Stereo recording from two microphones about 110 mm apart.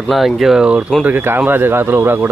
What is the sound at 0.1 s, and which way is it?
Speech, centre (ahead or behind).